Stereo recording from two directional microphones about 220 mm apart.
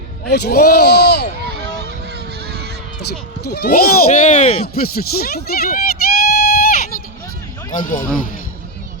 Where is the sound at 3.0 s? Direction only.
45° left (ahead or behind); by 4.7 s 30° left (ahead or behind).